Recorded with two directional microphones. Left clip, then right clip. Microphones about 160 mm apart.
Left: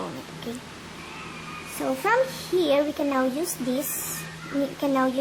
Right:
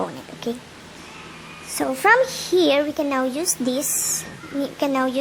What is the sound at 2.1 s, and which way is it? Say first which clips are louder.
A child's voice: right 7 dB; 40° right (ahead or behind).